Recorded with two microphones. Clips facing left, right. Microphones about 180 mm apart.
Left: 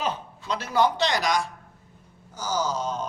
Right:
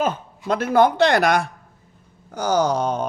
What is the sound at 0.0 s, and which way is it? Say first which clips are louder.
A woman's voice: right 6 dB; 50° right (ahead or behind).